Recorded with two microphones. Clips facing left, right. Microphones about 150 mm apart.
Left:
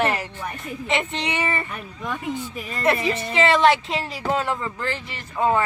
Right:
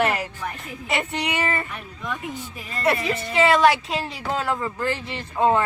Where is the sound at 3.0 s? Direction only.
Centre (ahead or behind).